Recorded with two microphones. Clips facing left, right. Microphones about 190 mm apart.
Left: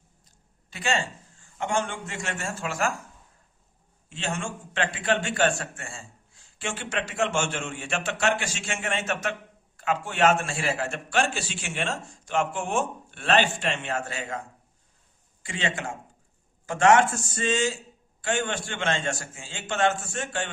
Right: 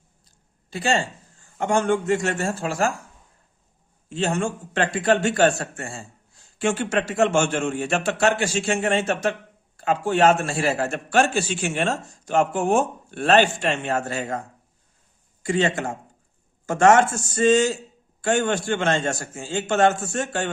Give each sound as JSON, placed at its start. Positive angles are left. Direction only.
{"t": 0.7, "sound": "a man's voice", "side_deg": -35}
{"t": 1.5, "sound": "a man's voice", "side_deg": -45}
{"t": 4.1, "sound": "a man's voice", "side_deg": -40}
{"t": 15.4, "sound": "a man's voice", "side_deg": -40}